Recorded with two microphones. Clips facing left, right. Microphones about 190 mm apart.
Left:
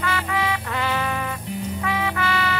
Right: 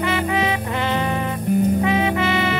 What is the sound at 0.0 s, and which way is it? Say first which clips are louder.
Music: right 4 dB; 20° right (ahead or behind).